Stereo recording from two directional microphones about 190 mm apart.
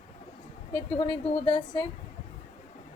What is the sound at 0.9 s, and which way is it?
Speech, 30° left (ahead or behind).